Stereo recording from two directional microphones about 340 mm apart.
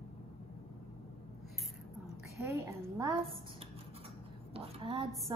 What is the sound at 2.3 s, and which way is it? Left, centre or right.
A woman's voice, centre.